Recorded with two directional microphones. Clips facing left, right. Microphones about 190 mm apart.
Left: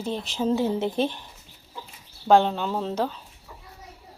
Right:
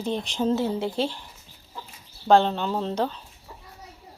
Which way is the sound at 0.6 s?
20° left (ahead or behind).